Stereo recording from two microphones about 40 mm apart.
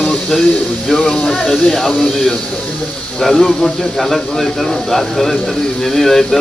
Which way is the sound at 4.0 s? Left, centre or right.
Centre.